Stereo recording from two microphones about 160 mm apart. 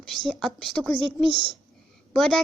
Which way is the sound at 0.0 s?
Centre (ahead or behind).